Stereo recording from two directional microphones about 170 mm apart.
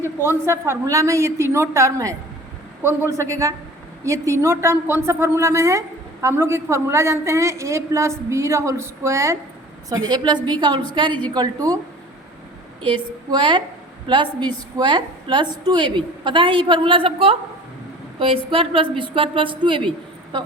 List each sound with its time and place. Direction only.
0.2 s a woman's voice: 15° right (ahead or behind)
13.3 s a woman's voice: 30° right (ahead or behind)